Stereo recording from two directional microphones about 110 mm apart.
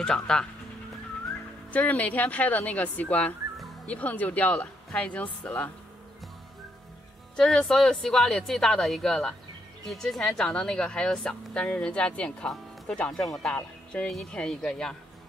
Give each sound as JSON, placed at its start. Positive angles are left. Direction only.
{"t": 0.0, "sound": "speech", "side_deg": 5}
{"t": 1.7, "sound": "a woman's voice", "side_deg": 15}
{"t": 7.3, "sound": "a woman's voice", "side_deg": 5}